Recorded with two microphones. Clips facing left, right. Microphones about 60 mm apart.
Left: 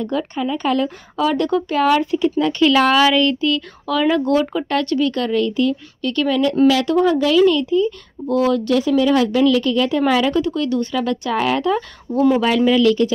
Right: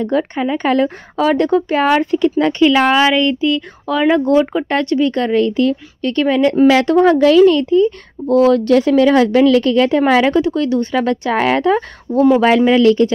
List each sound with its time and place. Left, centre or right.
0.0 s a woman's voice: right
2.6 s a woman's voice: right